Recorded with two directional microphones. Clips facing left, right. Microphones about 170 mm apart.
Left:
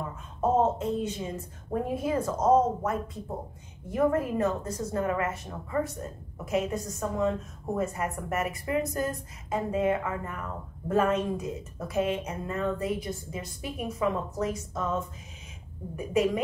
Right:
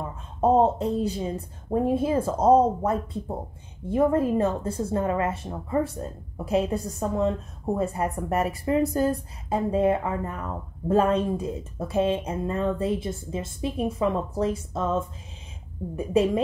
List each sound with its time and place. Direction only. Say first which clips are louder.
0.4 s a woman's voice: right 5 dB; 35° right (ahead or behind)